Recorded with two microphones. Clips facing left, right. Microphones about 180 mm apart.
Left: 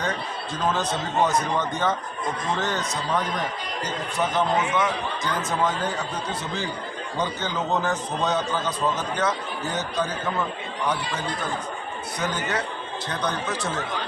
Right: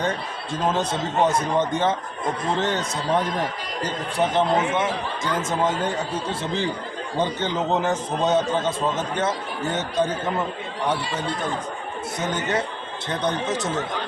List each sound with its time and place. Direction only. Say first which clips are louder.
0.0 s a man's voice: right 2 dB; 25° right (ahead or behind)
12.2 s a man's voice: right 2 dB; 25° right (ahead or behind)